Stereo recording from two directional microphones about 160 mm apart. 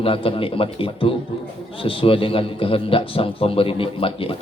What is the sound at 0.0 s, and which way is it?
A man's voice, 35° left (ahead or behind).